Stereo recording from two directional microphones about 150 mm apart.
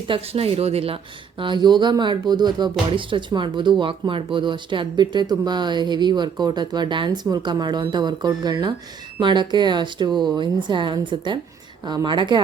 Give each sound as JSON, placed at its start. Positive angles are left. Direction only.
{"t": 0.1, "sound": "speech", "side_deg": -40}
{"t": 1.4, "sound": "speech", "side_deg": -30}